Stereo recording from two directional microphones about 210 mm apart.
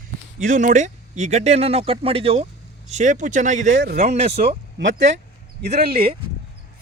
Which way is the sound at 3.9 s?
30° right (ahead or behind).